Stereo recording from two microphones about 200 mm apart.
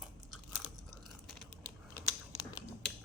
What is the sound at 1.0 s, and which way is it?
Crunch, 5° left (ahead or behind).